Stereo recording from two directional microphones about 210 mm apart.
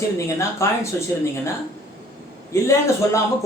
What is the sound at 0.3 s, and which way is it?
Speech, 15° left (ahead or behind).